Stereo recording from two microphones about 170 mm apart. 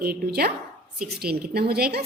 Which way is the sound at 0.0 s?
65° right (ahead or behind).